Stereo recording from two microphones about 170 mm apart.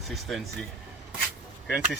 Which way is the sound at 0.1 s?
Centre (ahead or behind).